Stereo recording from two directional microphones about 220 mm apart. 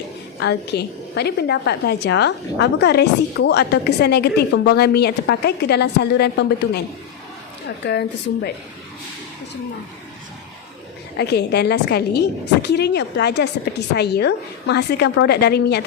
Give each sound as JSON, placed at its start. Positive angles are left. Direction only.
{"t": 0.3, "sound": "a woman's voice", "side_deg": 50}
{"t": 7.9, "sound": "a woman's voice", "side_deg": 50}
{"t": 11.2, "sound": "a woman's voice", "side_deg": 50}